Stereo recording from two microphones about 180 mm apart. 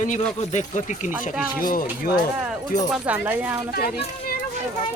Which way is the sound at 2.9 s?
10° right (ahead or behind).